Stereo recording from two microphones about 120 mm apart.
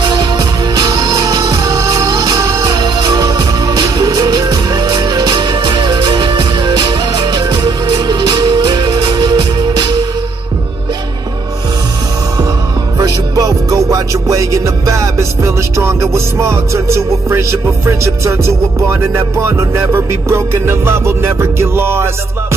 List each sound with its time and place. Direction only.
0.0 s music: 35° right (ahead or behind)
13.0 s music: 30° right (ahead or behind)